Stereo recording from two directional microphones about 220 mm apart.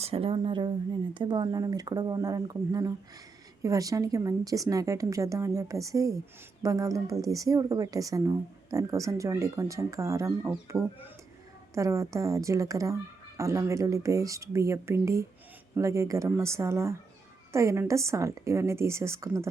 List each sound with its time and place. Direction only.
0.0 s a woman's voice: 25° right (ahead or behind)